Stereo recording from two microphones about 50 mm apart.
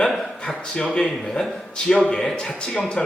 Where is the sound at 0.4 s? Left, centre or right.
Centre.